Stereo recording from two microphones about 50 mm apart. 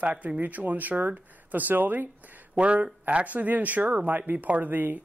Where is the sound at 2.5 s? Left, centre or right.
Right.